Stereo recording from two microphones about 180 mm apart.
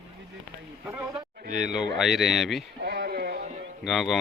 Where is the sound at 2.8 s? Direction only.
60° right (ahead or behind).